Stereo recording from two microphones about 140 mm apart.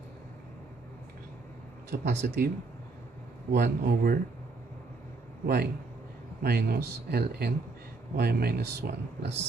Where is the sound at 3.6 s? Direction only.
90° right.